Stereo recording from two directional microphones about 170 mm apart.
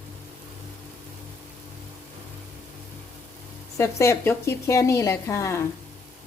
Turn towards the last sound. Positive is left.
turn(degrees=15)  # may be behind; listen again after turning